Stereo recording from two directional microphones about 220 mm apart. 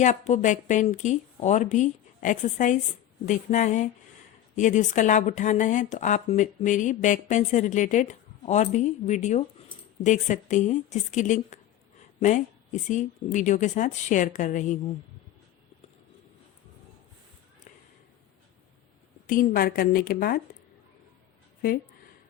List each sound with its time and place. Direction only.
0.0 s speech: 35° left (ahead or behind)
19.3 s speech: 40° left (ahead or behind)